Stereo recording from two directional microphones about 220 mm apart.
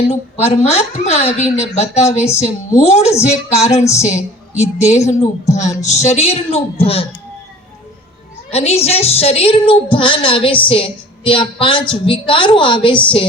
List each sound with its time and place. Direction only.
0.1 s a woman's voice: 30° left (ahead or behind)
8.4 s a woman's voice: 30° left (ahead or behind)